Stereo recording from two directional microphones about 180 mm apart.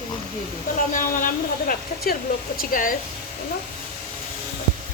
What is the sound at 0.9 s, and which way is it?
Speech, 50° left (ahead or behind).